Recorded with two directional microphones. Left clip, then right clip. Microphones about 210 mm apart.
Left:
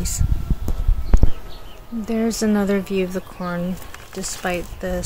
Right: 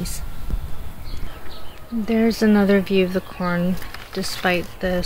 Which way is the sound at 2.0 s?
10° right (ahead or behind).